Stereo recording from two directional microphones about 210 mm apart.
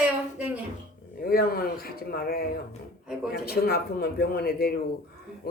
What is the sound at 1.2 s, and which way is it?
Speech, 45° left (ahead or behind).